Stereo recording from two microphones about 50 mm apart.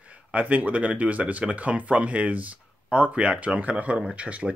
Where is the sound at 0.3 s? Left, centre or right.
Right.